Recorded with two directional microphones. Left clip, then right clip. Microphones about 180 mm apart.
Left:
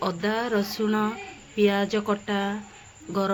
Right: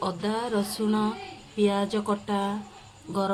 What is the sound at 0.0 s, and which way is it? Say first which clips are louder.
Speech: left 2 dB; 10° left (ahead or behind).